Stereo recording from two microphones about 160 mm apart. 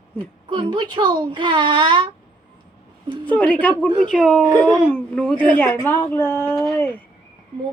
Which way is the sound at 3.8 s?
30° right (ahead or behind).